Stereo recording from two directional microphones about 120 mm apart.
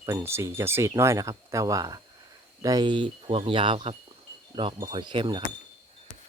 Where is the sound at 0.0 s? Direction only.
25° right (ahead or behind).